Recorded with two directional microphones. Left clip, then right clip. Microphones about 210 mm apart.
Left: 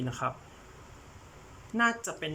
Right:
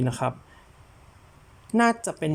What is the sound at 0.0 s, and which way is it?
Speech, 25° right (ahead or behind).